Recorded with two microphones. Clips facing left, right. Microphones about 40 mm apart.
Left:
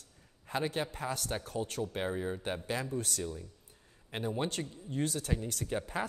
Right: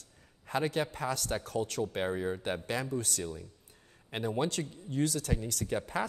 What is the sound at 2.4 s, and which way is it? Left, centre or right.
Speech, right.